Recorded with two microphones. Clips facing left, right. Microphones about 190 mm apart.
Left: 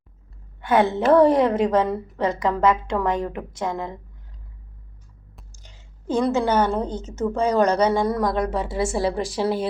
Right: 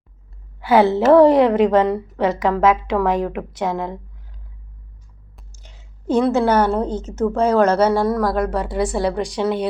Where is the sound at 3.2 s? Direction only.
85° right.